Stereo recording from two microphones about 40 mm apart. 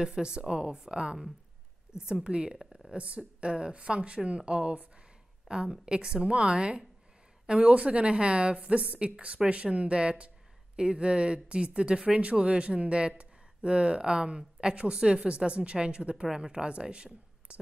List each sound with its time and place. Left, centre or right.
0.0 s speech: centre
16.3 s speech: centre